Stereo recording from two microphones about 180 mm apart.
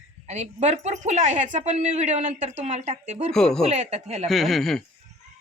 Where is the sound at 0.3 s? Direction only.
40° right (ahead or behind).